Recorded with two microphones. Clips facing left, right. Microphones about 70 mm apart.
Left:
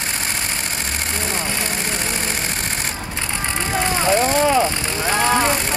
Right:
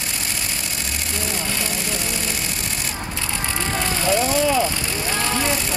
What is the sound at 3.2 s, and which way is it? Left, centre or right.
Vehicle, left.